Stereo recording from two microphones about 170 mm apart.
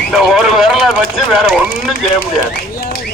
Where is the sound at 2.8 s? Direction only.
60° left (ahead or behind).